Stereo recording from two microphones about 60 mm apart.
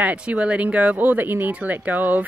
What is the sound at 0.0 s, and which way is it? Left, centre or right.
Speech, right.